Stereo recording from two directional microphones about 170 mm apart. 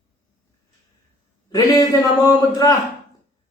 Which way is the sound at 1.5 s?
20° left (ahead or behind).